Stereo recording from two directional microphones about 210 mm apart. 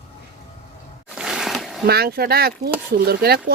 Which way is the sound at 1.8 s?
50° right (ahead or behind).